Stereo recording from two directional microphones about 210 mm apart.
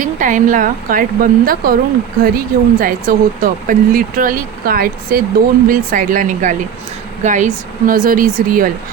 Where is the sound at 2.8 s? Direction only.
40° right (ahead or behind).